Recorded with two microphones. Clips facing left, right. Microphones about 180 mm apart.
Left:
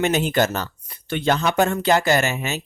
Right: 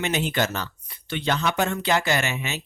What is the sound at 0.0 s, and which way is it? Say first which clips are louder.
Speech: left 5 dB; 45° left (ahead or behind).